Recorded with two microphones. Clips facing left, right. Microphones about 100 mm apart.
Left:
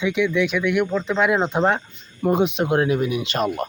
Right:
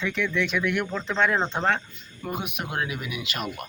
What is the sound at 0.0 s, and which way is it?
Speech, 5° left (ahead or behind).